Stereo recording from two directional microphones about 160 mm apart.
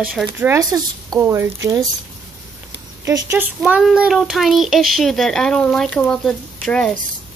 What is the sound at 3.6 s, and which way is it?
A child's voice, 5° right (ahead or behind).